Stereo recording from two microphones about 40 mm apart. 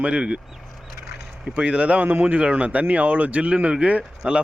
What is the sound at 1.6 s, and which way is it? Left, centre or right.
Speech, right.